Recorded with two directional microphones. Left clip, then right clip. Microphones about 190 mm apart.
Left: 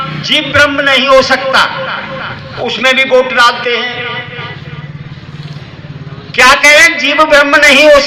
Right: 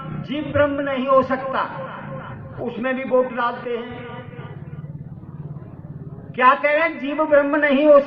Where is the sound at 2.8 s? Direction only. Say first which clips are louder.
Left 12 dB; 20° left (ahead or behind).